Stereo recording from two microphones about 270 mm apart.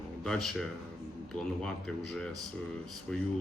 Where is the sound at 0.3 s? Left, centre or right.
Centre.